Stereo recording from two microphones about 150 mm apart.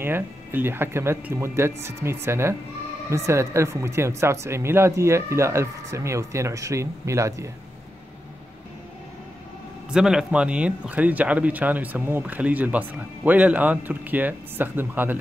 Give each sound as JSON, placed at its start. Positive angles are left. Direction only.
{"t": 0.0, "sound": "speech", "side_deg": -15}
{"t": 9.8, "sound": "speech", "side_deg": -5}